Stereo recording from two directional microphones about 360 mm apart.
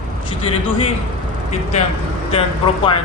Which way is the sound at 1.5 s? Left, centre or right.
Centre.